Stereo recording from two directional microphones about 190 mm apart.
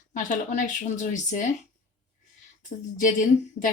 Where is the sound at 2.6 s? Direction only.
40° left (ahead or behind).